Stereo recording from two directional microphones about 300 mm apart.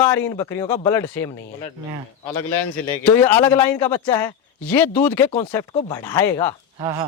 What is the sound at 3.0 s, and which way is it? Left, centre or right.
Speech, centre.